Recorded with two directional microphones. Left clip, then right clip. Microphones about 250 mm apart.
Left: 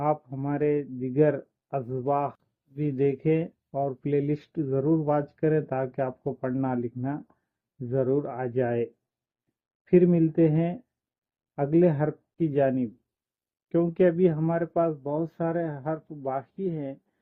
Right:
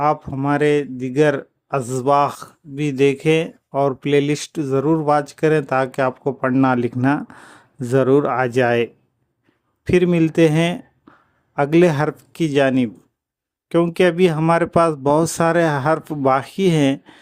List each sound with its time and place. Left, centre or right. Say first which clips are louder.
0.0 s speech: right 9 dB; right